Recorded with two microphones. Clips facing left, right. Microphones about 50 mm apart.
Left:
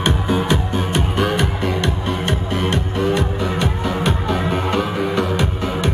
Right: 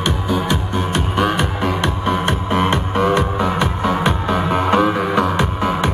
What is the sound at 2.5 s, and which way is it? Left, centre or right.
Music, right.